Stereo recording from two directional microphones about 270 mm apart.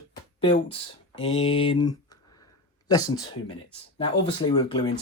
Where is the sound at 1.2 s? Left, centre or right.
Centre.